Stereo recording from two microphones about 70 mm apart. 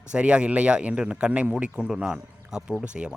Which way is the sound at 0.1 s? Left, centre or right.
Centre.